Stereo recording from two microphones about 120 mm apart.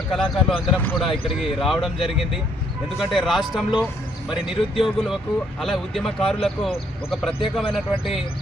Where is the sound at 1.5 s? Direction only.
Centre (ahead or behind).